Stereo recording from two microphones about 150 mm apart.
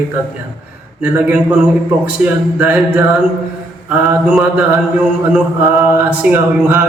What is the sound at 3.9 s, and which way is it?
A man's voice, 10° right (ahead or behind).